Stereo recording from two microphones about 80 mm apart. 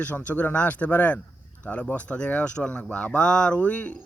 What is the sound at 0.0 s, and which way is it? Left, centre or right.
Speech, centre.